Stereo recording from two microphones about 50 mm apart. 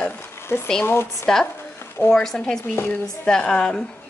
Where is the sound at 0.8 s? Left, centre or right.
Left.